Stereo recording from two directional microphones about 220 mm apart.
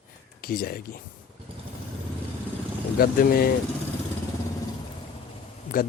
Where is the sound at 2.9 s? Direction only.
40° left (ahead or behind).